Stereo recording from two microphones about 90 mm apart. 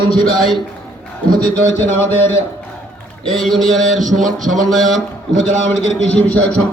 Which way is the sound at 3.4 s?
Centre (ahead or behind).